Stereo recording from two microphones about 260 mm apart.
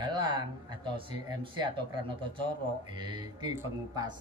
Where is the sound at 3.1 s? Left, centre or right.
Centre.